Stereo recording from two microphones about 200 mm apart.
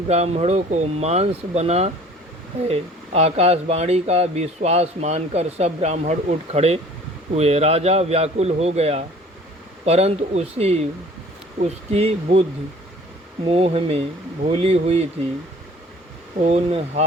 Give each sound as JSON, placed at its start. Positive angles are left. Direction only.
{"t": 0.1, "sound": "speech", "side_deg": -35}
{"t": 16.4, "sound": "speech", "side_deg": -30}